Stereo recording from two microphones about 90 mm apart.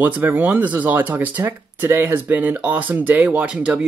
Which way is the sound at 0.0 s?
20° right (ahead or behind).